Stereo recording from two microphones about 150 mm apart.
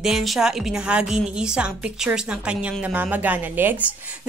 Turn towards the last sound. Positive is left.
turn(degrees=-15)  # may be behind; listen again after turning